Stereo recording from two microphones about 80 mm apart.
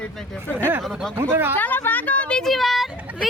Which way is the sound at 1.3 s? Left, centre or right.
Right.